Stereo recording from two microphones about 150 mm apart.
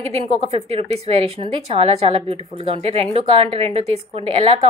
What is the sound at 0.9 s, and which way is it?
A woman's voice, 40° right (ahead or behind).